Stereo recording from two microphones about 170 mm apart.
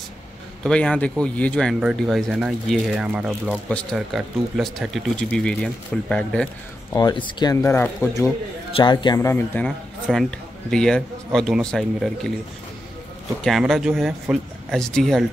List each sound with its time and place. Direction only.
0.7 s speech: 5° left (ahead or behind)
7.0 s speech: 25° left (ahead or behind)
8.7 s a man's voice: 25° left (ahead or behind); by 12.3 s 5° left (ahead or behind)
13.4 s speech: centre (ahead or behind)